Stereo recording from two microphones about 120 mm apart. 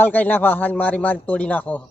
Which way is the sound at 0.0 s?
15° left (ahead or behind).